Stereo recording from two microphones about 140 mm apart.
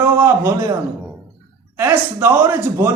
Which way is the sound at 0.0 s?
20° right (ahead or behind).